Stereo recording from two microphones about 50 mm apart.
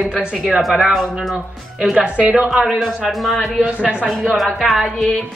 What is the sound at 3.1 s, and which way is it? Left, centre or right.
Speech, centre.